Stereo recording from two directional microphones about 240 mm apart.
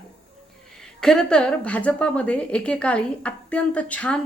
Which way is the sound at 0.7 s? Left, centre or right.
Centre.